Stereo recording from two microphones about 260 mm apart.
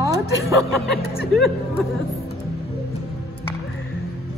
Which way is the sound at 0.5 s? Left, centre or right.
Centre.